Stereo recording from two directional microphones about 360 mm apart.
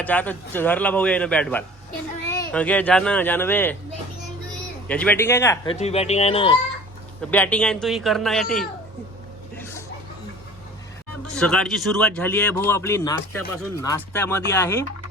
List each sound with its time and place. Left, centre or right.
0.0 s a man's voice: centre
4.9 s speech: centre
7.2 s a man's voice: centre
11.3 s a man's voice: centre